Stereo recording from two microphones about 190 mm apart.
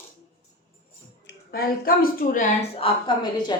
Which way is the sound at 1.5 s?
50° left (ahead or behind).